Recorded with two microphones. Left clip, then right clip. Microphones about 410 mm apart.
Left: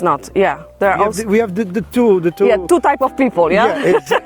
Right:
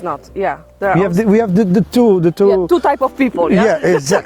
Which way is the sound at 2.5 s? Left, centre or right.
Left.